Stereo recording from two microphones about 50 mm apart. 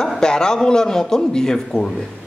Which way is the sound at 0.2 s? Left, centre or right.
Centre.